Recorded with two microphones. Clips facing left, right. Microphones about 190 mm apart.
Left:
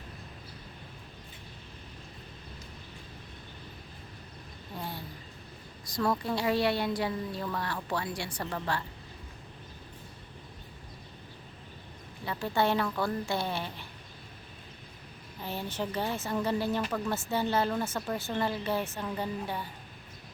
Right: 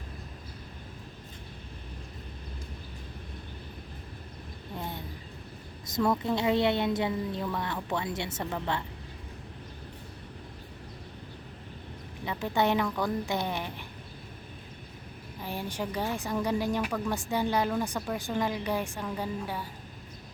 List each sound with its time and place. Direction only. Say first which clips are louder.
4.8 s a sound: right 1 dB; 20° right (ahead or behind)
6.1 s speech: right 2 dB; 20° right (ahead or behind)
12.2 s speech: right 1 dB; 20° right (ahead or behind)
15.4 s speech: even; 10° right (ahead or behind)